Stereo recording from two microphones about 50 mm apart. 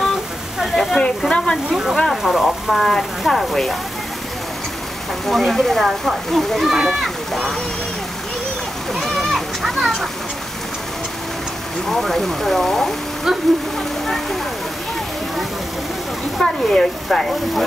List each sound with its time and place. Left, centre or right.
0.7 s sizzle: centre
1.3 s speech: centre
1.7 s speech: centre
5.2 s speech: centre
8.9 s a sound: centre
11.9 s speech: centre
16.3 s speech: centre